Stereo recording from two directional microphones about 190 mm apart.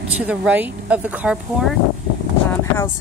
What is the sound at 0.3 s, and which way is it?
Speech, 5° right (ahead or behind).